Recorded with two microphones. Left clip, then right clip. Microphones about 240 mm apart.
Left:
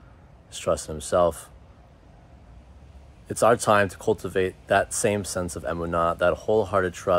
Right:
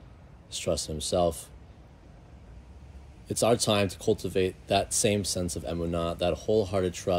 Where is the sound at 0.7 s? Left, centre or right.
Centre.